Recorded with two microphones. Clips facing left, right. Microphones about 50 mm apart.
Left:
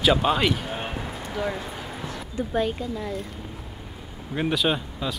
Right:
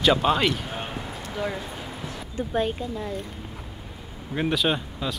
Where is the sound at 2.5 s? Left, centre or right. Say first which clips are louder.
Even; right.